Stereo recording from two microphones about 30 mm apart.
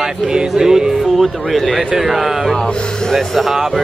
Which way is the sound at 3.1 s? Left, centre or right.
Centre.